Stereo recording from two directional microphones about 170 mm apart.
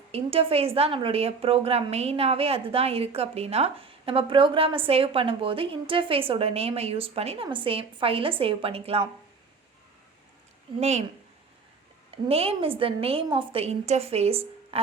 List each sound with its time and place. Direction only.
0.1 s a woman's voice: 35° right (ahead or behind)
10.8 s a woman's voice: 40° right (ahead or behind)
12.1 s a woman's voice: 35° right (ahead or behind)